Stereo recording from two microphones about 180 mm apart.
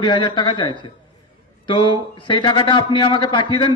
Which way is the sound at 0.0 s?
25° left (ahead or behind).